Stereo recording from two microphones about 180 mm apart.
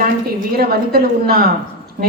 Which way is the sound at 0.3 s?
55° right (ahead or behind).